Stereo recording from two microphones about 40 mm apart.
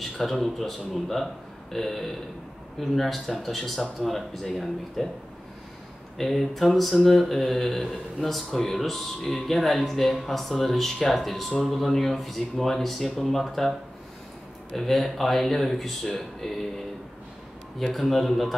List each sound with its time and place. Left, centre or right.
0.2 s speech: centre
6.1 s speech: centre
14.8 s speech: centre
17.9 s speech: centre